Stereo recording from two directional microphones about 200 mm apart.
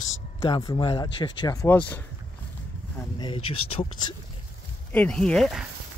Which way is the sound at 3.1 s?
25° left (ahead or behind).